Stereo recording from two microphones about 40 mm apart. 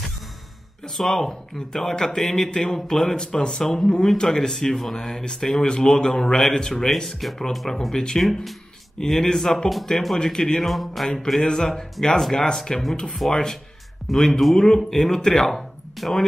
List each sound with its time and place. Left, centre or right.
0.9 s a man's voice: centre
7.2 s a man's voice: centre
8.2 s a man's voice: centre
10.6 s speech: centre
11.4 s a man's voice: centre